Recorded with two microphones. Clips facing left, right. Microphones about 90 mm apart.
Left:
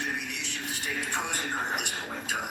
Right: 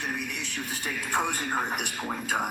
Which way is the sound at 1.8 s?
45° right (ahead or behind).